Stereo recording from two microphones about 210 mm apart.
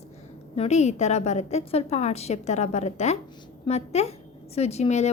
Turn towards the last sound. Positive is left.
turn(degrees=30)  # may be behind; listen again after turning